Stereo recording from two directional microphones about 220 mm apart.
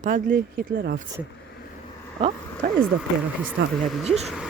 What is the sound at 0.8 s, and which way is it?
Speech, 45° right (ahead or behind).